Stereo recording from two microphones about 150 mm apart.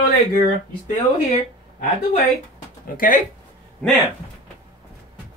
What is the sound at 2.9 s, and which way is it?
Speech, 65° left (ahead or behind).